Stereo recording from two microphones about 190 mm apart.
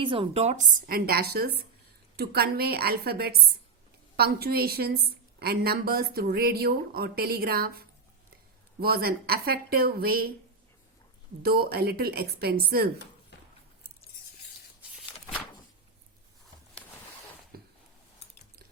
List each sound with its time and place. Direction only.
0.0 s a woman's voice: 25° right (ahead or behind); by 10.3 s 50° right (ahead or behind)
11.4 s a woman's voice: 55° right (ahead or behind)
17.5 s a sound: 55° right (ahead or behind)